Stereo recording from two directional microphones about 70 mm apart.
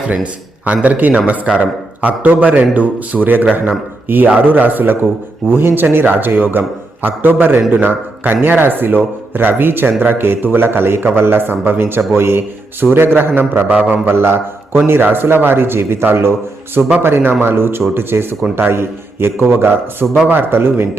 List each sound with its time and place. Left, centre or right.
0.1 s a man's voice: centre